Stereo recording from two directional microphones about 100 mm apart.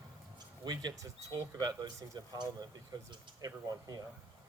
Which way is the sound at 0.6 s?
40° right (ahead or behind).